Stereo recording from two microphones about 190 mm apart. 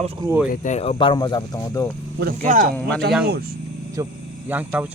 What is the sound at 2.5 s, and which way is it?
Speech, 45° right (ahead or behind).